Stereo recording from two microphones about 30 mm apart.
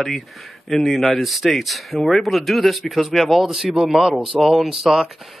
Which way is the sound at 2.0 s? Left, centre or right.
Centre.